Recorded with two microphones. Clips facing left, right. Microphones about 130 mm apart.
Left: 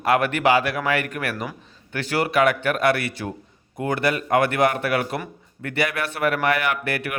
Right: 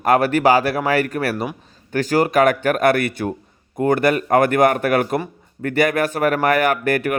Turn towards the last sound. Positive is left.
turn(degrees=-45)  # may be behind; listen again after turning